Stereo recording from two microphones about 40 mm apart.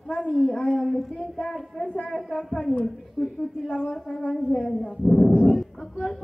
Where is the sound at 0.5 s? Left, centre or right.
Centre.